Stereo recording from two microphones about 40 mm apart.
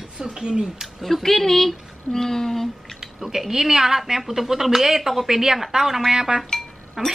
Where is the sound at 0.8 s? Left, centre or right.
Centre.